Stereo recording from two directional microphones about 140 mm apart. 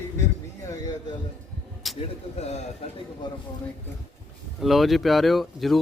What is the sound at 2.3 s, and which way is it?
Speech, 55° left (ahead or behind).